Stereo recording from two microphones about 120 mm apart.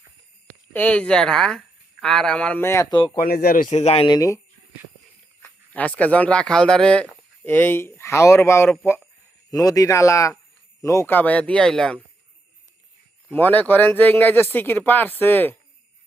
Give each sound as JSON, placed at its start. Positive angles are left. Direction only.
{"t": 0.7, "sound": "speech", "side_deg": 10}
{"t": 2.9, "sound": "speech", "side_deg": 40}
{"t": 3.2, "sound": "speech", "side_deg": 80}
{"t": 4.0, "sound": "speech", "side_deg": 30}
{"t": 5.4, "sound": "speech", "side_deg": 10}
{"t": 13.3, "sound": "speech", "side_deg": 15}